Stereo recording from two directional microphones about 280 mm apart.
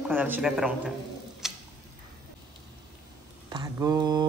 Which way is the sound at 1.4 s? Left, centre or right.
Centre.